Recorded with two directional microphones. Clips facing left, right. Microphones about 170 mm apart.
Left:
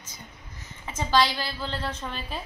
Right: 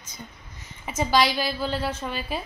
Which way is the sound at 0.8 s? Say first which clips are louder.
Right 2 dB; 15° right (ahead or behind).